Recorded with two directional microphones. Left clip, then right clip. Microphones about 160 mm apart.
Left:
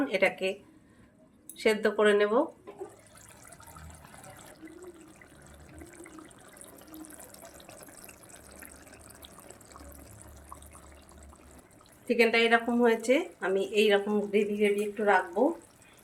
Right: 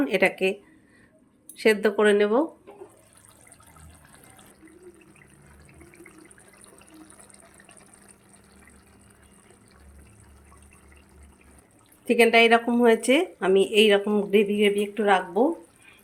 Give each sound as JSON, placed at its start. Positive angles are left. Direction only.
{"t": 0.0, "sound": "a woman's voice", "side_deg": -45}
{"t": 1.5, "sound": "a woman's voice", "side_deg": -45}
{"t": 12.0, "sound": "a woman's voice", "side_deg": -55}
{"t": 12.9, "sound": "speech", "side_deg": -55}
{"t": 14.3, "sound": "speech", "side_deg": -70}